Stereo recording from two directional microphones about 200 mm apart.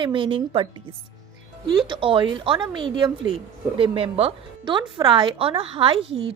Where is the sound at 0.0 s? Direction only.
25° right (ahead or behind).